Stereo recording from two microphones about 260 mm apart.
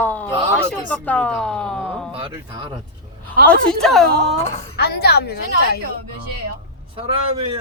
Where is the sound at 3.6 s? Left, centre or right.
Centre.